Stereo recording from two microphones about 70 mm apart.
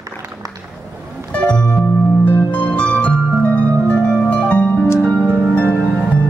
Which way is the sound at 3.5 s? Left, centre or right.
Right.